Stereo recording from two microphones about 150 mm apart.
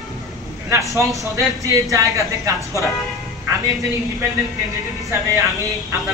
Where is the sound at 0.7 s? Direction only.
20° right (ahead or behind).